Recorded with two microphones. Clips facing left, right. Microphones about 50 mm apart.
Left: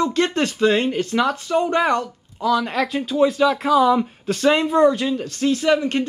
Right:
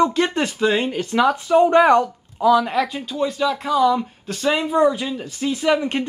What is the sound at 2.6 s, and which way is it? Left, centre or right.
Speech, centre.